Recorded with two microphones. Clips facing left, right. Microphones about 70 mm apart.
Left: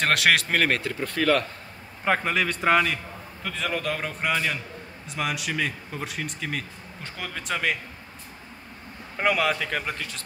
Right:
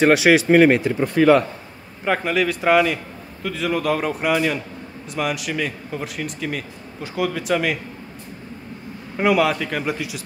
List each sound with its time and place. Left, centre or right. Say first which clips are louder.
0.0 s speech: right 8 dB; centre
2.0 s speech: right 4 dB; centre
9.1 s speech: right 6 dB; centre